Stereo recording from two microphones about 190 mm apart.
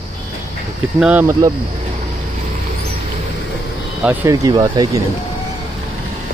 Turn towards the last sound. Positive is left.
turn(degrees=-20)  # may be behind; listen again after turning